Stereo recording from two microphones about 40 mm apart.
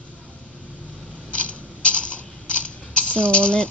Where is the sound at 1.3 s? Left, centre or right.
Left.